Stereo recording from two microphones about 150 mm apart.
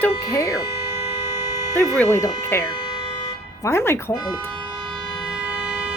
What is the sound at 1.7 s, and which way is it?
Speech, 15° left (ahead or behind).